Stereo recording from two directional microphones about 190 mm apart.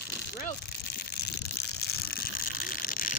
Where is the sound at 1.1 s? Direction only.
55° left (ahead or behind).